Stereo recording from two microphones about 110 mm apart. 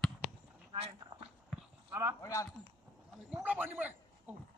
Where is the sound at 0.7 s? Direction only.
65° right (ahead or behind).